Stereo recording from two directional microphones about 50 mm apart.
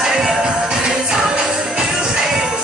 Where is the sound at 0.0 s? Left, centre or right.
Centre.